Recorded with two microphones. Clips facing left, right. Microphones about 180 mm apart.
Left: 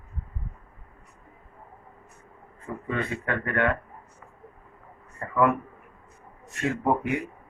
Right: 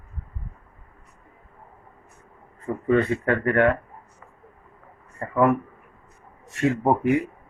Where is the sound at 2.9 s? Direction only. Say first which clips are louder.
Right 9 dB; 40° right (ahead or behind).